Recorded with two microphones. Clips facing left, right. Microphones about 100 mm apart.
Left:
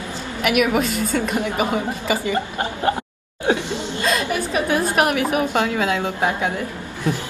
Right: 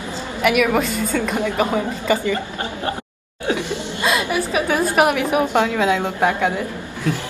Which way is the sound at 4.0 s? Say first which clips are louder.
Right 2 dB; 15° right (ahead or behind).